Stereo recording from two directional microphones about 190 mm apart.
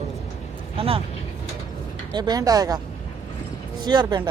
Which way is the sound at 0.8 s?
30° right (ahead or behind).